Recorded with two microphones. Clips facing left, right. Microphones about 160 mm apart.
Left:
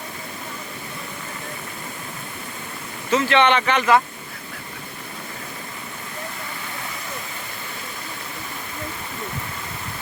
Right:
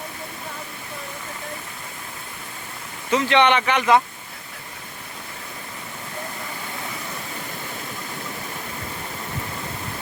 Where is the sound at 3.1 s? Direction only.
15° right (ahead or behind).